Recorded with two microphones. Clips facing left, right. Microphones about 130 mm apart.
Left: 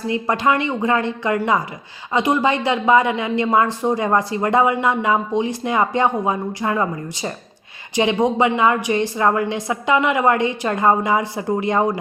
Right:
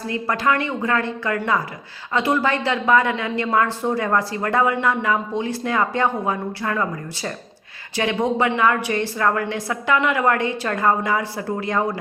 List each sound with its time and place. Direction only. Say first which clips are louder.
0.1 s a woman's voice: left 3 dB; 20° left (ahead or behind)